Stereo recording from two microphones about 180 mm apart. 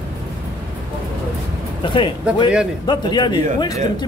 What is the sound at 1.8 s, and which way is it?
A man's voice, 25° left (ahead or behind).